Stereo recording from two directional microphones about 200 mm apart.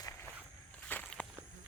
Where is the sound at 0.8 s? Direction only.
5° left (ahead or behind).